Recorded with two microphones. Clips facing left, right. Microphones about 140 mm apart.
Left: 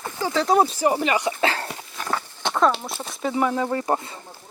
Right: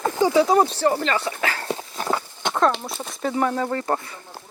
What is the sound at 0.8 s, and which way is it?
Speech, 10° left (ahead or behind).